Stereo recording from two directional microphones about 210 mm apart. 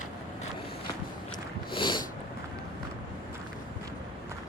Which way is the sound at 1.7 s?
20° left (ahead or behind).